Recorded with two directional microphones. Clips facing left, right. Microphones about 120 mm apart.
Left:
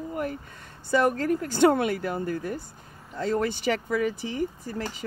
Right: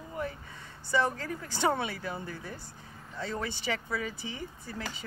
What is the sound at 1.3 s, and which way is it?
Speech, 65° left (ahead or behind).